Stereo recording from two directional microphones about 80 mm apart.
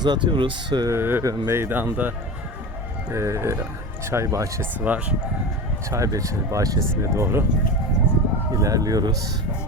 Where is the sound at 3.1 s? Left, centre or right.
Right.